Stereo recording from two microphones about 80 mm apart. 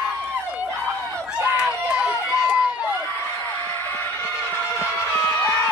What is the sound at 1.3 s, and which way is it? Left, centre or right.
Run, centre.